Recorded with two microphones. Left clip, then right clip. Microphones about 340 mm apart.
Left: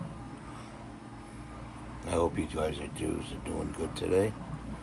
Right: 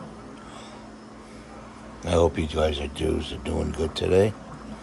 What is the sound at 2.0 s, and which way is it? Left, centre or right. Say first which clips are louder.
Speech: right 8 dB; right.